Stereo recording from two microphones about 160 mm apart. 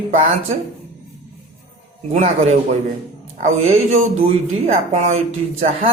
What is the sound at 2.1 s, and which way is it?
Speech, 45° right (ahead or behind).